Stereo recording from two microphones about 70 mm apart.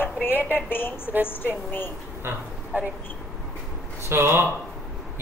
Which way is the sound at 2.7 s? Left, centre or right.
Right.